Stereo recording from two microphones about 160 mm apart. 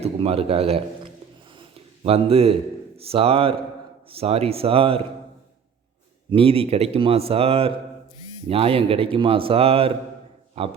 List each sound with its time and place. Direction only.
0.0 s a man's voice: 35° right (ahead or behind)
2.0 s speech: 40° right (ahead or behind)
6.3 s speech: 35° right (ahead or behind)